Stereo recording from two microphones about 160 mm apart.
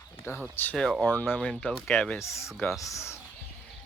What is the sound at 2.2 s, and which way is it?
Speech, 20° left (ahead or behind).